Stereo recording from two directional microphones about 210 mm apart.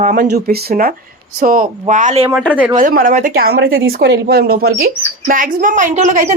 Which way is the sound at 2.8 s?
40° right (ahead or behind).